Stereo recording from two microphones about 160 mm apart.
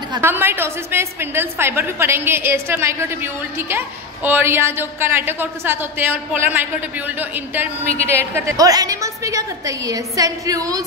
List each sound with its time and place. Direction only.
0.2 s a woman's voice: 15° right (ahead or behind)
7.6 s a woman's voice: 40° left (ahead or behind)
8.0 s a woman's voice: 15° right (ahead or behind)